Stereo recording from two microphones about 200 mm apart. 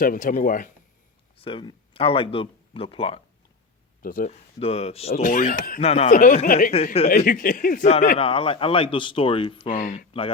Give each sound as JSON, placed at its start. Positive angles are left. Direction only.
{"t": 0.0, "sound": "speech", "side_deg": 45}
{"t": 1.4, "sound": "speech", "side_deg": 25}
{"t": 4.0, "sound": "speech", "side_deg": 45}
{"t": 4.6, "sound": "speech", "side_deg": 30}
{"t": 5.8, "sound": "speech", "side_deg": 30}
{"t": 9.7, "sound": "speech", "side_deg": 40}